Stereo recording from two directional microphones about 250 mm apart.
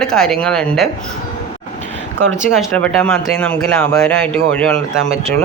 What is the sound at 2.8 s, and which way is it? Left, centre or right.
Speech, centre.